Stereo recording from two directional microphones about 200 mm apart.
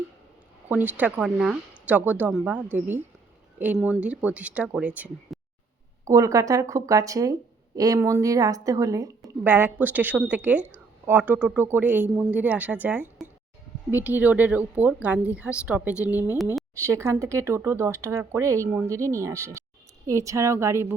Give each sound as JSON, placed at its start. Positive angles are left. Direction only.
{"t": 0.7, "sound": "speech", "side_deg": -10}